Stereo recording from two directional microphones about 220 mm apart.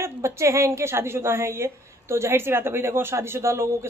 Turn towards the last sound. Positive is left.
turn(degrees=-10)  # may be behind; listen again after turning